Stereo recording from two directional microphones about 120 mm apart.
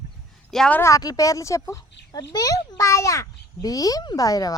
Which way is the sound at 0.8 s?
30° left (ahead or behind).